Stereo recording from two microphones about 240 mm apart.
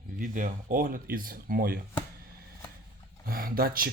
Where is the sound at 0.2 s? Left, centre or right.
Right.